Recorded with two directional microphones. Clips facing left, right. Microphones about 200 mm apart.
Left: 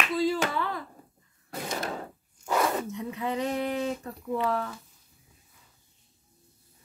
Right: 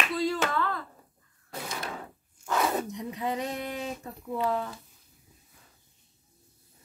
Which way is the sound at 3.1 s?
15° right (ahead or behind).